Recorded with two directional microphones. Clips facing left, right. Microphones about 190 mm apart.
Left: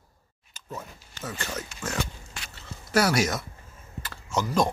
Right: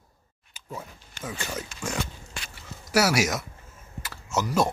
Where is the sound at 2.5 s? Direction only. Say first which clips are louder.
Even; 10° right (ahead or behind).